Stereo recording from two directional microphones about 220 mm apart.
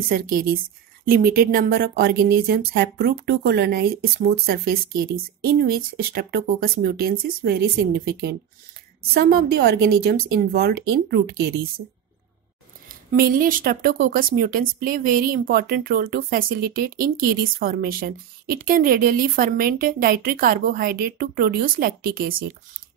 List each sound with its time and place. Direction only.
0.1 s speech: 40° right (ahead or behind)
12.8 s speech: 40° right (ahead or behind)